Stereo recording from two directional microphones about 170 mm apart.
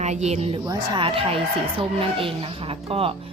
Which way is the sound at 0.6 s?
25° right (ahead or behind).